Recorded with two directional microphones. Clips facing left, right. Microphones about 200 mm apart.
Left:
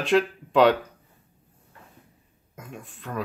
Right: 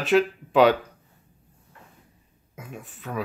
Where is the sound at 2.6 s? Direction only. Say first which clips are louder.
Right 1 dB; 5° right (ahead or behind).